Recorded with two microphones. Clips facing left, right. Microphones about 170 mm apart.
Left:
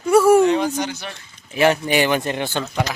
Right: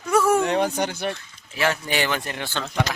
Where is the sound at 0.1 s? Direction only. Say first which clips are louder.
Left 7 dB; 10° left (ahead or behind).